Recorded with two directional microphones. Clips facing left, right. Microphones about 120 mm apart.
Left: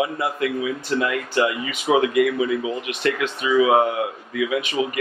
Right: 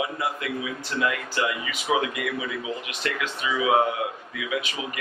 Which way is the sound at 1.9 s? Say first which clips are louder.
Left 5 dB; 45° left (ahead or behind).